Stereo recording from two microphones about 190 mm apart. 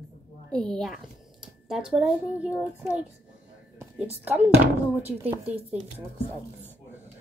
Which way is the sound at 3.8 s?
10° right (ahead or behind).